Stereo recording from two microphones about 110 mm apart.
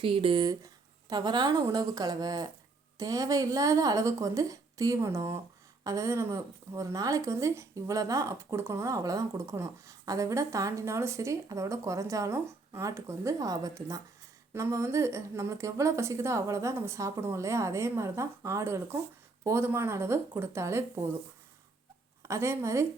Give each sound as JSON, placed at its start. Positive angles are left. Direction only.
{"t": 0.0, "sound": "speech", "side_deg": -55}
{"t": 1.1, "sound": "speech", "side_deg": -40}
{"t": 22.2, "sound": "speech", "side_deg": -25}